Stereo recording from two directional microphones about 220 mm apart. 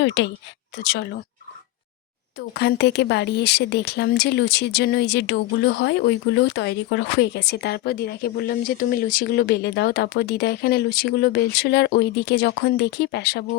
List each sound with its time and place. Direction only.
0.0 s speech: 55° left (ahead or behind)
2.4 s speech: 50° left (ahead or behind)